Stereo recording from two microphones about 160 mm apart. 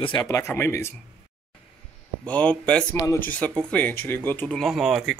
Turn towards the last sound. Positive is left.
turn(degrees=0)  # may be behind; listen again after turning